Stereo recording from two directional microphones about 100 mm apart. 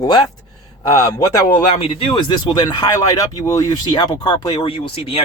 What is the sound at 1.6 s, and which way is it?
Speech, 70° left (ahead or behind).